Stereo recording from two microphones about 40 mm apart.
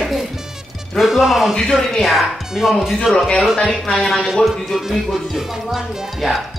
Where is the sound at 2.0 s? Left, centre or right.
Centre.